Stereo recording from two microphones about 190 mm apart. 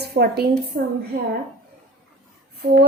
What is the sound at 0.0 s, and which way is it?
Speech, 60° right (ahead or behind).